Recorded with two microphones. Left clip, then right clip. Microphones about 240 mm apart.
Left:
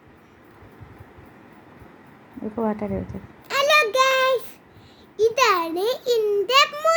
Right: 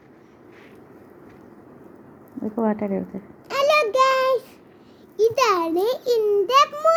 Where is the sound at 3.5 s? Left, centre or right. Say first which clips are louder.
Left 1 dB; centre.